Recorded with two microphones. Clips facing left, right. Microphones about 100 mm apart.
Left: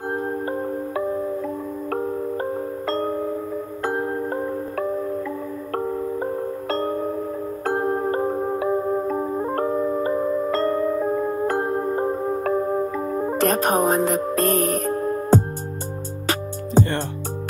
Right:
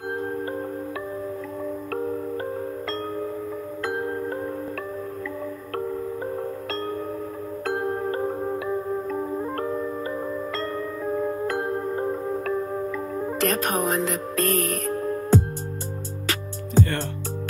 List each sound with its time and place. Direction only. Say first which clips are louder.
0.1 s music: left 3 dB; 30° left (ahead or behind)
2.9 s music: left 8 dB; 35° left (ahead or behind)
6.7 s music: left 9 dB; 35° left (ahead or behind)